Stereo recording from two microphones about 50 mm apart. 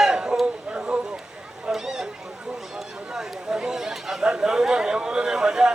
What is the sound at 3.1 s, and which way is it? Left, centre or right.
Chatter, centre.